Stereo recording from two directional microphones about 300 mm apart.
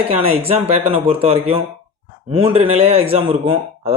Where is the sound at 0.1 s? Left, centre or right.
Centre.